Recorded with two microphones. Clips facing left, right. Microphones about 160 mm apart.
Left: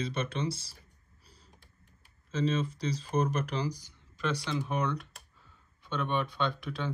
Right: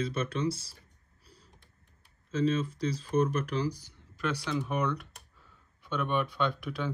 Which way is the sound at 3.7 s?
5° right (ahead or behind).